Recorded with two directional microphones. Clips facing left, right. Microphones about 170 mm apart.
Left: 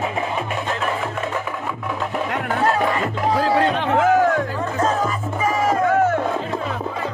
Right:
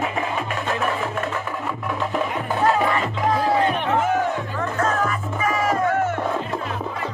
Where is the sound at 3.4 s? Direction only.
90° left.